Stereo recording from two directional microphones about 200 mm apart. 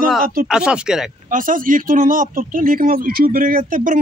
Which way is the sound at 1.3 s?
45° right (ahead or behind).